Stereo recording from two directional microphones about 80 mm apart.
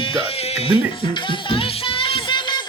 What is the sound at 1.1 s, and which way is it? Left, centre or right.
Music, left.